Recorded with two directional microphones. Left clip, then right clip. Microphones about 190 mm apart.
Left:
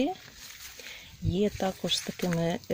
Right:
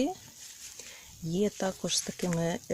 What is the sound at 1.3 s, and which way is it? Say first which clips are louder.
Speech: left 2 dB; centre (ahead or behind).